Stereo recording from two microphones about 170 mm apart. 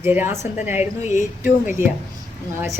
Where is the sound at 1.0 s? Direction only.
45° left (ahead or behind).